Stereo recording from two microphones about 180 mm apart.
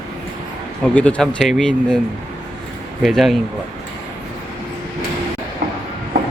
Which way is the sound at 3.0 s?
Centre (ahead or behind).